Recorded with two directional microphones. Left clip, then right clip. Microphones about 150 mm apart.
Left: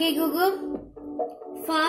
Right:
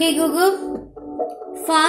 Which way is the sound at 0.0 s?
5° right (ahead or behind).